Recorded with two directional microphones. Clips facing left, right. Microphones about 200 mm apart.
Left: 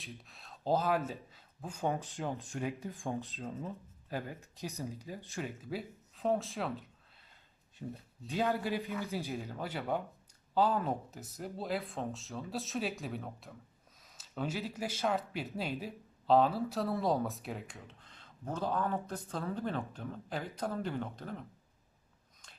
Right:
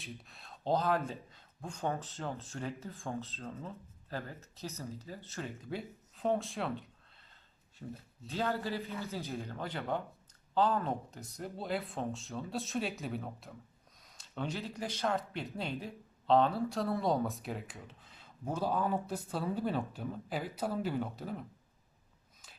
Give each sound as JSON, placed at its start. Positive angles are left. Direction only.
{"t": 0.0, "sound": "speech", "side_deg": 0}
{"t": 7.8, "sound": "speech", "side_deg": 20}